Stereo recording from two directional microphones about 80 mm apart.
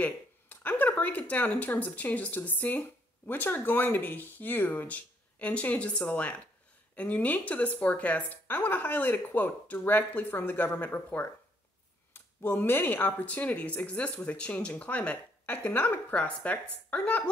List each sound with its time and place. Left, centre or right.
0.0 s a woman's voice: left